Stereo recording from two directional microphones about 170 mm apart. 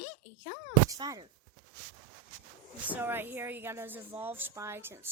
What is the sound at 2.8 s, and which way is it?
A woman's voice, 10° right (ahead or behind).